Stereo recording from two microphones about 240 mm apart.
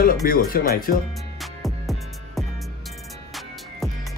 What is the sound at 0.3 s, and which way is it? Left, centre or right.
Speech, left.